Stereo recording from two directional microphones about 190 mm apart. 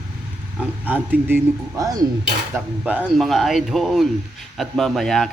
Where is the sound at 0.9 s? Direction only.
10° right (ahead or behind).